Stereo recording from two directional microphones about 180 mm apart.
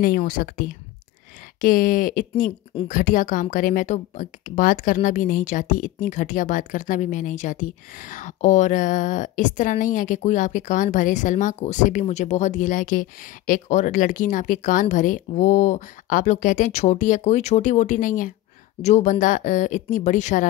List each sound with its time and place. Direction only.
0.0 s speech: 55° left (ahead or behind)